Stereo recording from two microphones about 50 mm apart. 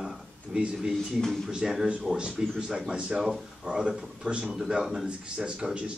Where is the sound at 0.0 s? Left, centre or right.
Centre.